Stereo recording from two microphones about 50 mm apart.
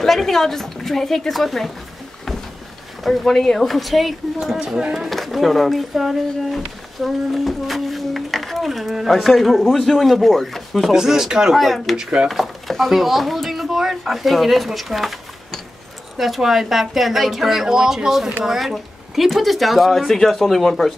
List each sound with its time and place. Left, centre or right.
0.0 s speech: centre
3.0 s speech: centre
4.4 s speech: centre
4.9 s speech: centre
10.9 s speech: centre
11.5 s speech: centre
12.0 s speech: centre
12.3 s speech: centre
16.2 s speech: centre